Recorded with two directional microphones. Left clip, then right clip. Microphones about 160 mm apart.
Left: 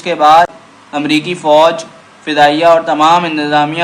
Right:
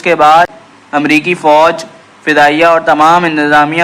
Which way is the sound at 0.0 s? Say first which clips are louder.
Right 1 dB; 30° right (ahead or behind).